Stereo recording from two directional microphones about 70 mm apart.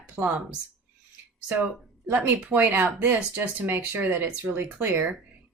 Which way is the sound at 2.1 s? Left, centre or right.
Right.